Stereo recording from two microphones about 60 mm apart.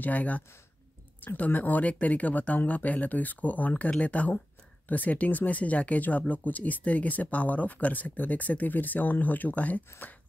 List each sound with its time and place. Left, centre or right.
0.0 s speech: left